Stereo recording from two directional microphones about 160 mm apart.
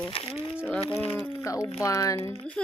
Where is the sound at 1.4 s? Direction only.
20° left (ahead or behind).